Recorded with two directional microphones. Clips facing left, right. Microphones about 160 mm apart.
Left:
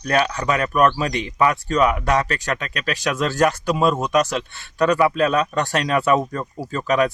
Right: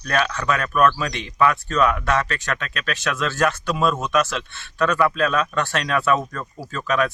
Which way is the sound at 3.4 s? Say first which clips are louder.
Left 3 dB; 15° left (ahead or behind).